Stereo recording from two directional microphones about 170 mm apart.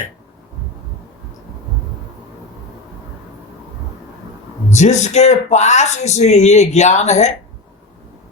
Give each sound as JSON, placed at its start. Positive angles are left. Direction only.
{"t": 4.7, "sound": "speech", "side_deg": 45}